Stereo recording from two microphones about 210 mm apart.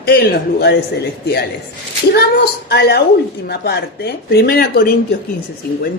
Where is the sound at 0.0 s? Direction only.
50° left (ahead or behind).